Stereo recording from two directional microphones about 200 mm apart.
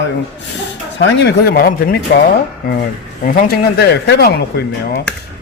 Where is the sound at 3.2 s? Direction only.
45° left (ahead or behind).